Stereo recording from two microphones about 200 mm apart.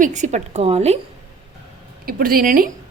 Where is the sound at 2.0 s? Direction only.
45° right (ahead or behind).